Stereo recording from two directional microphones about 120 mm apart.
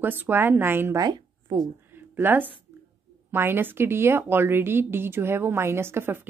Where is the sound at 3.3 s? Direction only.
20° right (ahead or behind).